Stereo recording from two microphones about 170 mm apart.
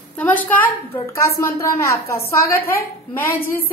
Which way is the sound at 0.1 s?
10° left (ahead or behind).